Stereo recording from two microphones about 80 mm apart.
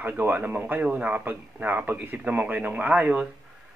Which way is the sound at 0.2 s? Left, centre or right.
Right.